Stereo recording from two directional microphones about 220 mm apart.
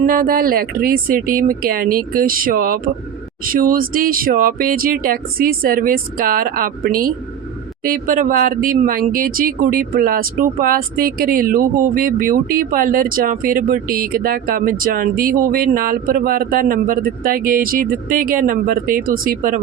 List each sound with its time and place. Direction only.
0.0 s speech: 40° right (ahead or behind)